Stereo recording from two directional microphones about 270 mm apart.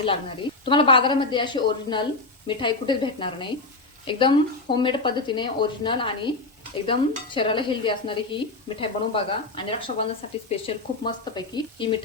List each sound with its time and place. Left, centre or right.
0.0 s speech: centre